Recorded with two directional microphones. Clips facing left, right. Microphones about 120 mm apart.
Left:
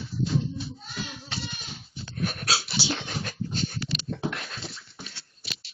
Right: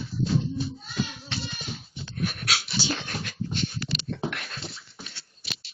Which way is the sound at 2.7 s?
15° left (ahead or behind).